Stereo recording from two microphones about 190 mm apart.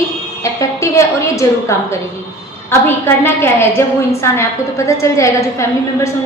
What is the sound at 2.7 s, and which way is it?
A woman's voice, 10° left (ahead or behind).